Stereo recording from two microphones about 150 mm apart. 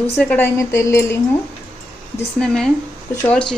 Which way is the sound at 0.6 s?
20° left (ahead or behind).